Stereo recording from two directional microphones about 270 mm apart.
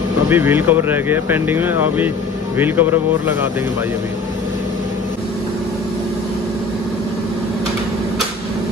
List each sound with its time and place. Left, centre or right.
0.3 s speech: centre